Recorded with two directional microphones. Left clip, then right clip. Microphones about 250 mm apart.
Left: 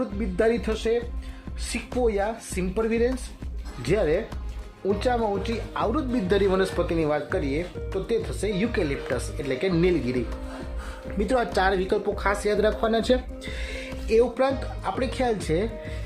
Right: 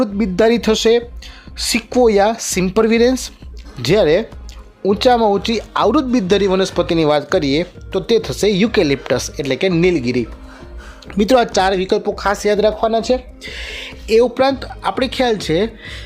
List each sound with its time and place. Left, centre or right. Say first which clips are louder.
0.0 s speech: right 10 dB; right
12.5 s speech: right 8 dB; centre
13.4 s speech: right 7 dB; centre